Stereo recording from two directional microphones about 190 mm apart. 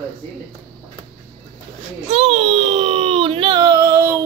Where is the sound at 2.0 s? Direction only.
35° right (ahead or behind).